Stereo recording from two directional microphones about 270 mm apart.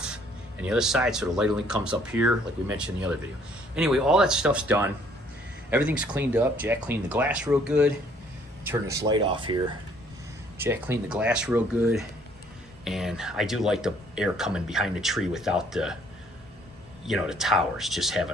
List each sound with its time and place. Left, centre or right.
0.6 s speech: centre
17.1 s speech: centre